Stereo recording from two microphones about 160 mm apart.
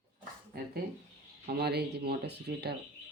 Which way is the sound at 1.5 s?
85° right.